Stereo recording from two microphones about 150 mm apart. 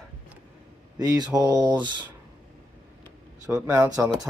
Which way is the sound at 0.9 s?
25° right (ahead or behind).